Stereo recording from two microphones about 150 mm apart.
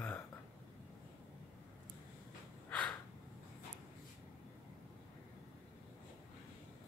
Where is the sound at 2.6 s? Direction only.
10° left (ahead or behind).